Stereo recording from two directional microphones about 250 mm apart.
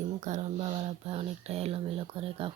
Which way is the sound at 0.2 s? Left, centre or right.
Right.